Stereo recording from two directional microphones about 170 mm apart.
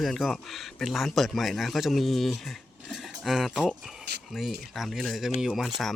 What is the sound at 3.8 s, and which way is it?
Speech, 5° right (ahead or behind).